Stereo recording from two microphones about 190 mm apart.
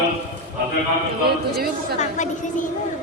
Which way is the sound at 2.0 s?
40° left (ahead or behind).